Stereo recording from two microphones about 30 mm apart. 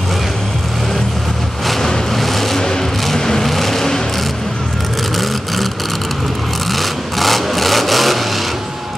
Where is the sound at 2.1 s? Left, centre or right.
Centre.